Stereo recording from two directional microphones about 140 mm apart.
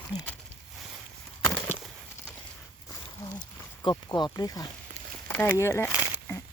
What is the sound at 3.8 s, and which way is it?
Speech, 30° left (ahead or behind).